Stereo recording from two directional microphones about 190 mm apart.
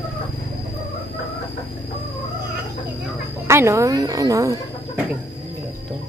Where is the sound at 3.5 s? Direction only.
15° right (ahead or behind).